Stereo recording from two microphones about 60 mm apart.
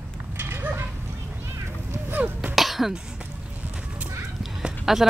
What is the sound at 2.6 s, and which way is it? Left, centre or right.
Cough, centre.